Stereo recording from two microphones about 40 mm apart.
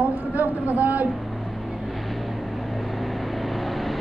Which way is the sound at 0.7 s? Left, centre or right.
Right.